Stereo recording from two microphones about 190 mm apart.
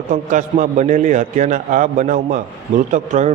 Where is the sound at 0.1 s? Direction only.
40° right (ahead or behind).